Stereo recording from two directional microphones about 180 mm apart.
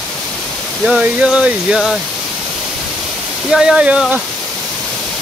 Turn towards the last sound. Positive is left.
turn(degrees=-5)  # may be behind; listen again after turning